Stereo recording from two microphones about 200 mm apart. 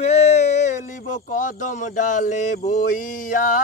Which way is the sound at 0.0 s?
30° left (ahead or behind).